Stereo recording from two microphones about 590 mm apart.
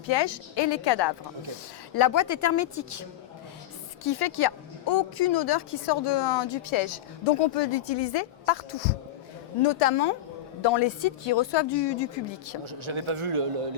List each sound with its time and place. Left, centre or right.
0.0 s a woman's voice: left
4.0 s a woman's voice: left
7.3 s speech: left
9.6 s speech: left
10.6 s a woman's voice: left
12.6 s a man's voice: right